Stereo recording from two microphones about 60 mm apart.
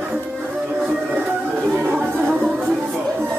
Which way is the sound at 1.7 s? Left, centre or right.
Right.